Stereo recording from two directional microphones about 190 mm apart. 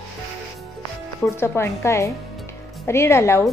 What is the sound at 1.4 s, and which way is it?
A woman's voice, 15° left (ahead or behind).